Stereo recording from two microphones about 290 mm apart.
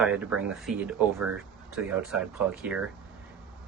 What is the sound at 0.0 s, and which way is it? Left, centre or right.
Speech, centre.